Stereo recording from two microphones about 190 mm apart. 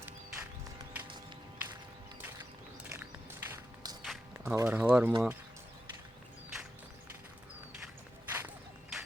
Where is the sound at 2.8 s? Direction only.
10° right (ahead or behind).